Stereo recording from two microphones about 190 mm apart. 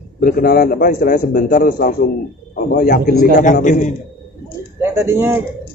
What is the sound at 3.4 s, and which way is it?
Speech, 40° left (ahead or behind).